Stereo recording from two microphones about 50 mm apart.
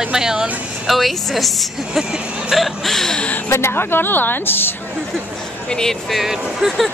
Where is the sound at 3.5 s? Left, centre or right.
Left.